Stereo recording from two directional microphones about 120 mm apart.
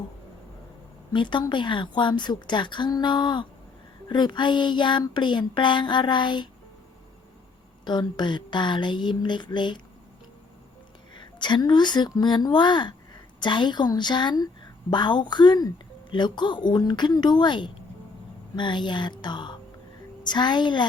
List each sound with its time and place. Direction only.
1.1 s a woman's voice: 40° left (ahead or behind)
7.9 s a woman's voice: 40° left (ahead or behind)
11.1 s a woman's voice: 40° left (ahead or behind)